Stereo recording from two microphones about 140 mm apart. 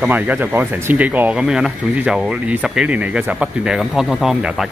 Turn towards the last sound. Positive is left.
turn(degrees=-5)  # may be behind; listen again after turning